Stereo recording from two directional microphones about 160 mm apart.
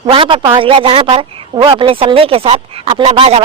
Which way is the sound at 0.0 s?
35° right (ahead or behind).